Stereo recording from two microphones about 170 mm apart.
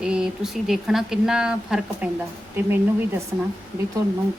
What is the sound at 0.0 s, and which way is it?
Speech, 5° right (ahead or behind).